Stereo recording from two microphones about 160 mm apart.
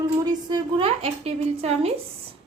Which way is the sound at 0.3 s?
25° right (ahead or behind).